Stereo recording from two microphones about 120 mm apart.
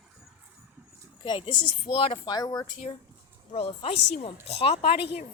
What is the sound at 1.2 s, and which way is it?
Speech, 40° left (ahead or behind).